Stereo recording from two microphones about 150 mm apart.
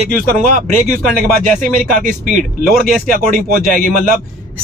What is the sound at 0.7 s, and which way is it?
Speech, 55° right (ahead or behind).